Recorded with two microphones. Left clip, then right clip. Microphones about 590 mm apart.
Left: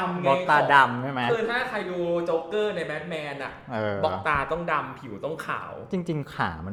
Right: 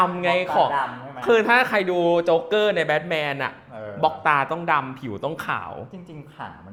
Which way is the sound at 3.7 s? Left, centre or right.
Left.